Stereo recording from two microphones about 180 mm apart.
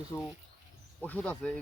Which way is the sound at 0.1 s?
20° left (ahead or behind).